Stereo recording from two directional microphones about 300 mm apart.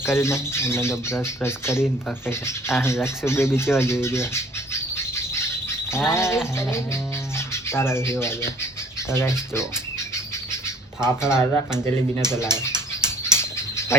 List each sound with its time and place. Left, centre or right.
0.0 s speech: centre
11.0 s speech: centre
11.7 s speech: centre
12.4 s speech: centre
13.0 s a sound: centre